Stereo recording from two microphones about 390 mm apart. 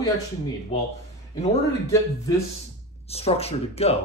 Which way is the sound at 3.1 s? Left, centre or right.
Centre.